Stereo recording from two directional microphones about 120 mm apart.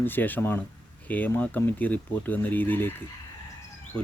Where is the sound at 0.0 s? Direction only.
15° left (ahead or behind).